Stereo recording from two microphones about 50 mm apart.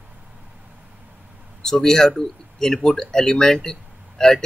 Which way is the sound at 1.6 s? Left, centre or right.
Centre.